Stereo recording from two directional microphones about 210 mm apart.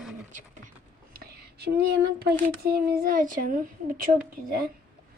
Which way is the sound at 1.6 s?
50° right (ahead or behind).